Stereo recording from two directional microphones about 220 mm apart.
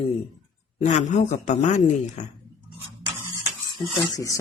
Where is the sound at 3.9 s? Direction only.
15° left (ahead or behind).